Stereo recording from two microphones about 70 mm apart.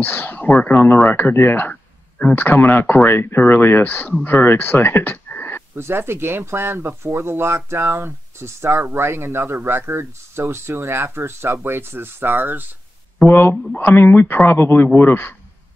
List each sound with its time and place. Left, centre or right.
0.0 s speech: left
5.8 s speech: right
13.2 s speech: left